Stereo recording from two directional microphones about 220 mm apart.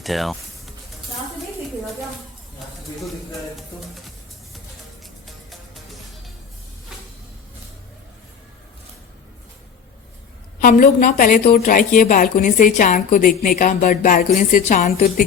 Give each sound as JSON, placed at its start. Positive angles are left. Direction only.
{"t": 0.0, "sound": "music", "side_deg": 0}
{"t": 5.2, "sound": "music", "side_deg": 0}
{"t": 10.6, "sound": "a woman's voice", "side_deg": 40}